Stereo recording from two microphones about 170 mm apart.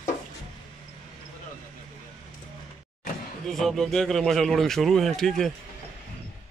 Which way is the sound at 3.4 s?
Centre (ahead or behind).